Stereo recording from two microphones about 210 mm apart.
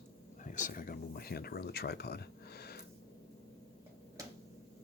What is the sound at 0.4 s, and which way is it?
Speech, 35° left (ahead or behind).